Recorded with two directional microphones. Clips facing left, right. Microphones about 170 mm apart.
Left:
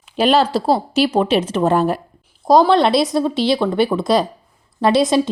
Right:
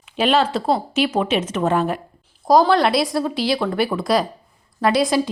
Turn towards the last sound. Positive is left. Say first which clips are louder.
# left 3 dB
turn(degrees=25)  # may be behind; listen again after turning